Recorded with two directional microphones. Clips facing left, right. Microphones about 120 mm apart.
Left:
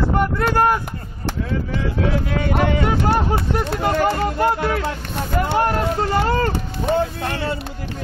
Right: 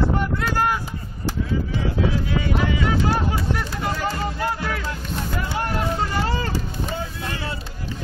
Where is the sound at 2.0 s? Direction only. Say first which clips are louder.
Left 2 dB; 60° left (ahead or behind).